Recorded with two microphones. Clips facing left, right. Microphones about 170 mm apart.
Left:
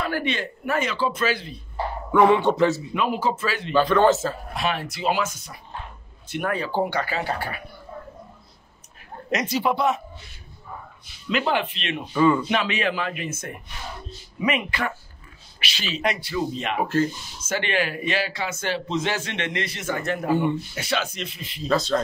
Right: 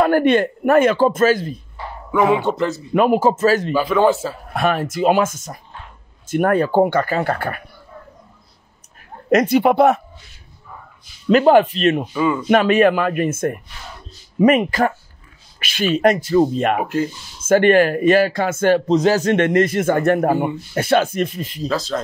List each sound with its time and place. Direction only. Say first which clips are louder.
0.0 s a man's voice: right 12 dB; 50° right (ahead or behind)
2.1 s a man's voice: right 1 dB; centre (ahead or behind)
2.9 s a man's voice: right 9 dB; 50° right (ahead or behind)
3.7 s speech: right 2 dB; 10° right (ahead or behind)
4.6 s a man's voice: right 12 dB; 50° right (ahead or behind)
9.3 s speech: right 10 dB; 55° right (ahead or behind)
11.2 s a man's voice: right 12 dB; 45° right (ahead or behind)
12.1 s a man's voice: even; 5° right (ahead or behind)
12.4 s a man's voice: right 11 dB; 50° right (ahead or behind)
16.8 s speech: right 1 dB; 15° right (ahead or behind)
17.4 s a man's voice: right 13 dB; 50° right (ahead or behind)
21.6 s a man's voice: even; centre (ahead or behind)